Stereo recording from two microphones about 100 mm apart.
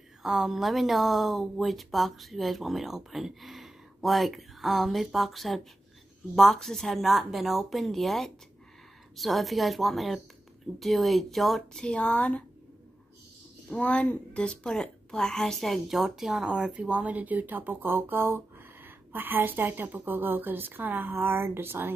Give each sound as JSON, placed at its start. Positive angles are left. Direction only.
{"t": 0.2, "sound": "speech", "side_deg": 0}
{"t": 13.7, "sound": "a woman's voice", "side_deg": 10}